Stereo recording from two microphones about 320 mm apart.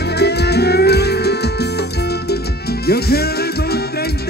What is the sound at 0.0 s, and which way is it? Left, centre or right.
Music, left.